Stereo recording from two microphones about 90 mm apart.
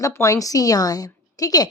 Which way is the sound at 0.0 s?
35° left (ahead or behind).